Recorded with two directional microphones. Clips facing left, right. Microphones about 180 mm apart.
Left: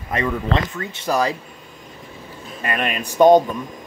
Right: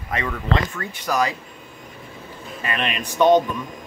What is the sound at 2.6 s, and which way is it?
Speech, 45° left (ahead or behind).